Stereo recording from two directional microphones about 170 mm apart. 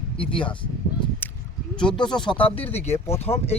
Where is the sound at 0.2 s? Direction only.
30° left (ahead or behind).